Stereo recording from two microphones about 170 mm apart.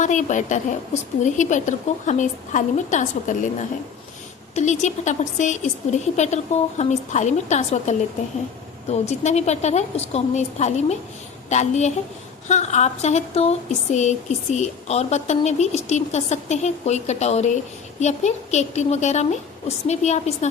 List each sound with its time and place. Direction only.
0.0 s speech: 45° left (ahead or behind)
4.5 s speech: 45° left (ahead or behind)